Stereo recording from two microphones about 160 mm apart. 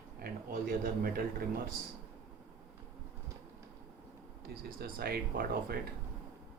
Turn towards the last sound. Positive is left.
turn(degrees=-75)  # may be behind; listen again after turning